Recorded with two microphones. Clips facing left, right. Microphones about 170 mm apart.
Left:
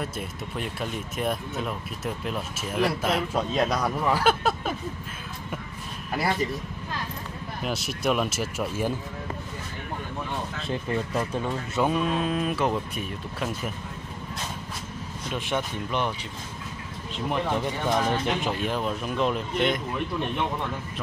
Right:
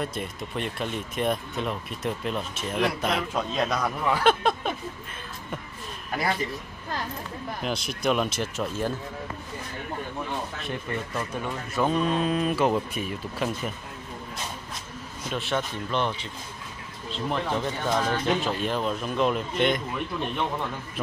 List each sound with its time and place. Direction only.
0.0 s speech: 5° left (ahead or behind)
7.6 s speech: 5° left (ahead or behind)
10.6 s speech: 25° left (ahead or behind)
11.9 s speech: 5° left (ahead or behind)
15.3 s speech: 10° left (ahead or behind)
19.1 s speech: 5° right (ahead or behind)